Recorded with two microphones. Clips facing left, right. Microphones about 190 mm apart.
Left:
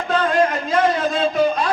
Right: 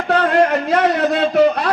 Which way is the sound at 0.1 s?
65° right (ahead or behind).